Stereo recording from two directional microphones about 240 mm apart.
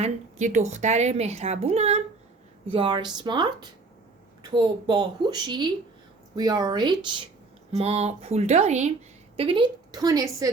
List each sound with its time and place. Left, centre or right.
0.0 s a woman's voice: right; by 10.5 s centre